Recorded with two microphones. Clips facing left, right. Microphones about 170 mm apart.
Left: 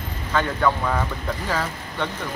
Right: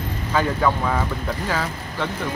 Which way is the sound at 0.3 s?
5° right (ahead or behind).